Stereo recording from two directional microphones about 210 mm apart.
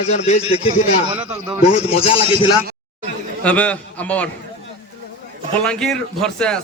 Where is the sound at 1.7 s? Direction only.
25° left (ahead or behind).